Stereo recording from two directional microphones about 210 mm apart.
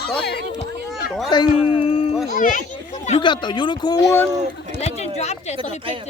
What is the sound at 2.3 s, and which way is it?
Children playing, 40° left (ahead or behind).